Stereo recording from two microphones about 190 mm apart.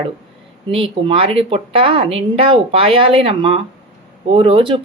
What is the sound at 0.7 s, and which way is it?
A woman's voice, 30° right (ahead or behind).